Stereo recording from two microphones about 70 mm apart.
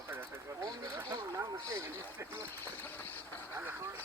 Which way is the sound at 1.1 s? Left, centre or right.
Right.